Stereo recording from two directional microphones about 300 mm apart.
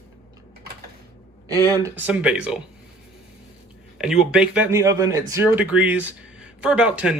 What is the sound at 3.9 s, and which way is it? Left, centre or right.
Speech, centre.